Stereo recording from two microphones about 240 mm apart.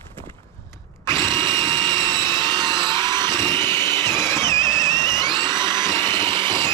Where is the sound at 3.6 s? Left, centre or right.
Centre.